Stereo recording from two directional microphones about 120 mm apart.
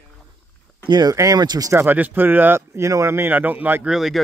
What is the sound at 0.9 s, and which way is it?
Speech, 35° right (ahead or behind).